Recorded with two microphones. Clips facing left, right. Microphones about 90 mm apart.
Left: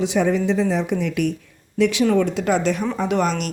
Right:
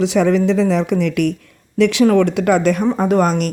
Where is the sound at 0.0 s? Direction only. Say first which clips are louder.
Right 5 dB; 90° right.